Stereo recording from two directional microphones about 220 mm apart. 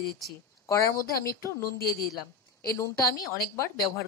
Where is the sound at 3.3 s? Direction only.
45° left (ahead or behind).